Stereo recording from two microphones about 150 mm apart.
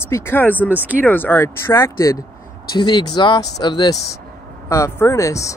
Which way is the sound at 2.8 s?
30° left (ahead or behind).